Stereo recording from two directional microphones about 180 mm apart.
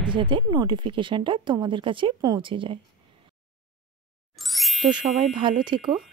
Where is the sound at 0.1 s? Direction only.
30° right (ahead or behind).